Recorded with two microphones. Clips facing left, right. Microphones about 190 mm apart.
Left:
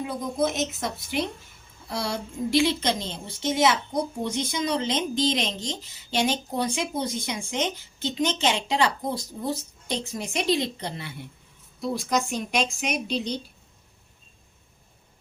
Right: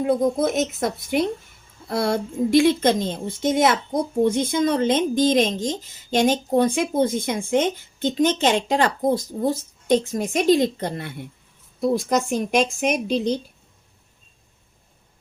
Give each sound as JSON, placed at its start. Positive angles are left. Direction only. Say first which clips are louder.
{"t": 0.0, "sound": "speech", "louder": "right 7 dB", "side_deg": -50}